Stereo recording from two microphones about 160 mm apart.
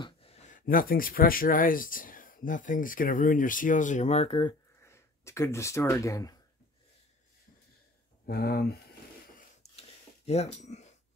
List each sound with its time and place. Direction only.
0.0 s speech: 40° left (ahead or behind)
4.8 s speech: 15° left (ahead or behind)
8.3 s speech: 70° left (ahead or behind)
9.6 s a sound: 40° left (ahead or behind)